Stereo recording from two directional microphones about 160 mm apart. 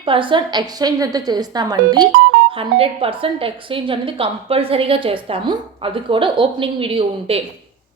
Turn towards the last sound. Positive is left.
turn(degrees=-35)  # may be behind; listen again after turning